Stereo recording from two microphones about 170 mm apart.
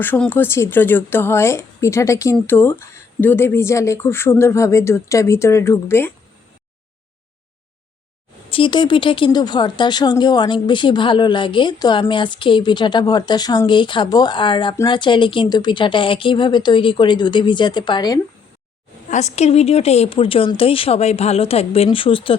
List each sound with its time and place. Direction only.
0.0 s speech: 10° left (ahead or behind)
8.4 s speech: 30° left (ahead or behind)
19.1 s a woman's voice: 40° left (ahead or behind)